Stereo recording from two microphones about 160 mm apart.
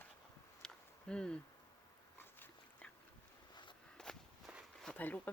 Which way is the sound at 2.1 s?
15° left (ahead or behind).